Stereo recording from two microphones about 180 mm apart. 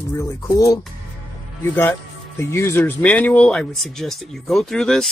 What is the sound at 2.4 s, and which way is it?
Speech, 15° left (ahead or behind).